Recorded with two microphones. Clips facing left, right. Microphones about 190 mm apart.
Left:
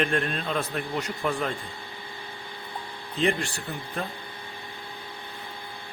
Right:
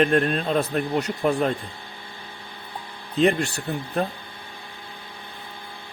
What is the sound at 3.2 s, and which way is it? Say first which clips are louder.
Speech: right 6 dB; 40° right (ahead or behind).